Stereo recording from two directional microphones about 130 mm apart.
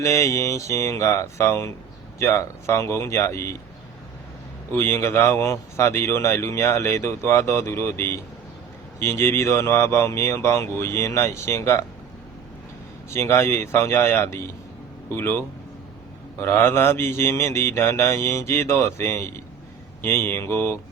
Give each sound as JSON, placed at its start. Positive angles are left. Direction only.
{"t": 0.0, "sound": "a man's voice", "side_deg": 25}
{"t": 4.7, "sound": "a man's voice", "side_deg": 15}
{"t": 13.1, "sound": "a man's voice", "side_deg": 20}